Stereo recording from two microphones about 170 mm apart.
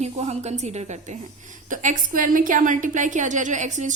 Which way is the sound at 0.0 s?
40° right (ahead or behind).